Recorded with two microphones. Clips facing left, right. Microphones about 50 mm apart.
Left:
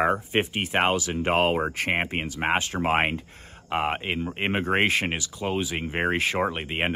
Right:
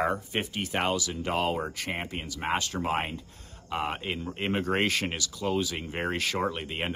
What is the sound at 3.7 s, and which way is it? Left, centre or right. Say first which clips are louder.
Speech: left 5 dB; left.